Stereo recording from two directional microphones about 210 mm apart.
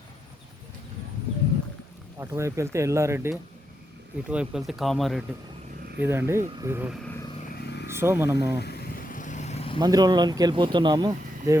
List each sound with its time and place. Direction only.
2.1 s speech: 15° right (ahead or behind)
6.0 s speech: 10° right (ahead or behind)
7.9 s speech: 10° right (ahead or behind)
8.5 s vehicle: 50° left (ahead or behind); by 9.8 s 25° left (ahead or behind)
9.8 s speech: 20° right (ahead or behind)